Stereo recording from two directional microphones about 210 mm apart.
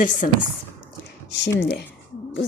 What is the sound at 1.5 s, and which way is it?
Speech, 50° left (ahead or behind).